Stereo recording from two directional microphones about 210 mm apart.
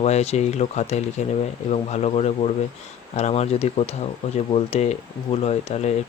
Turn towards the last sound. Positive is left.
turn(degrees=30)  # may be behind; listen again after turning